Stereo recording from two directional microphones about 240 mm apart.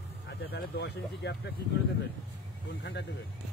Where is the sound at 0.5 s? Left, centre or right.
Left.